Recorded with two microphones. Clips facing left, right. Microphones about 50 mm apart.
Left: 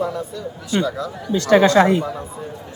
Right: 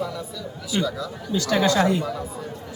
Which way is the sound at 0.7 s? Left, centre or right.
Left.